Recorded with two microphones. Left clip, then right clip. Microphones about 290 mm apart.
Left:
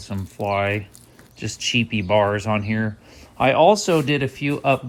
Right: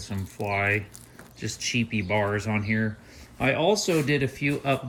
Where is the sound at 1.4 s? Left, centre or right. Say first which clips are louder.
Left 6 dB; centre.